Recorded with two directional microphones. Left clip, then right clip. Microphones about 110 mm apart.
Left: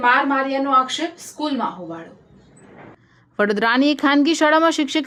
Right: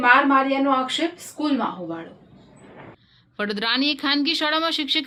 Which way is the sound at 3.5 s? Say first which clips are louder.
Left 4 dB; 45° left (ahead or behind).